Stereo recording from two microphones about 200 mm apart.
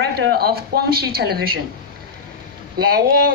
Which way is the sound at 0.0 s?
55° right (ahead or behind).